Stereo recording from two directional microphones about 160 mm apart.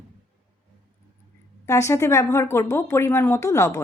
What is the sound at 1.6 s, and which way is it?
A woman's voice, 20° left (ahead or behind).